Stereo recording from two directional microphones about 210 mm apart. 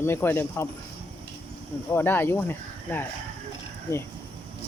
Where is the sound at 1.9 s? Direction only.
10° left (ahead or behind).